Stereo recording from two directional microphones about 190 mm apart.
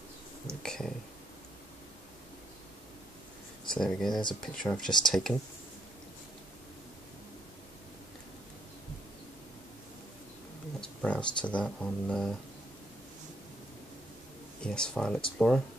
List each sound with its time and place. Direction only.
0.5 s speech: 5° left (ahead or behind)
3.6 s speech: 5° left (ahead or behind)
10.8 s speech: 5° left (ahead or behind)
14.6 s speech: 5° left (ahead or behind)